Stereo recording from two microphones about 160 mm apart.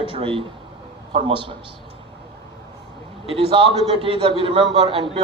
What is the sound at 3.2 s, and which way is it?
A man's voice, 35° right (ahead or behind).